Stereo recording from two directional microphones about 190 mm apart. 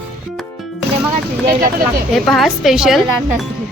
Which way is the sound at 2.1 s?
Centre (ahead or behind).